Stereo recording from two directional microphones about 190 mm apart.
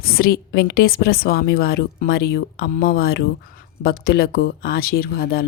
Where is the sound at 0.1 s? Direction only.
50° left (ahead or behind).